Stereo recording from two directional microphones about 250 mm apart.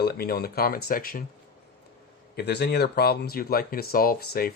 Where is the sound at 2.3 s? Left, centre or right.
Left.